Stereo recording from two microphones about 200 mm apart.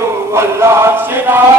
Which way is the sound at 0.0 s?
15° right (ahead or behind).